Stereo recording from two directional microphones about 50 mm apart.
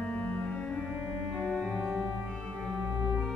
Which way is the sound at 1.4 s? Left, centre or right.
Centre.